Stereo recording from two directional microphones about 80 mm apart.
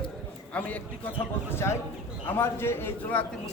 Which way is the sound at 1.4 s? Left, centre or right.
Left.